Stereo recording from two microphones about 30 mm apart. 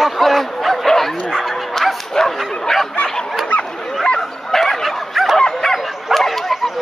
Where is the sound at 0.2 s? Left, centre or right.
Centre.